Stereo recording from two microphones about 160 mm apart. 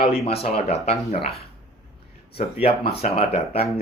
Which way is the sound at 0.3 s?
40° left (ahead or behind).